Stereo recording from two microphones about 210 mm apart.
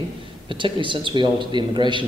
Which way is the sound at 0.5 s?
25° right (ahead or behind).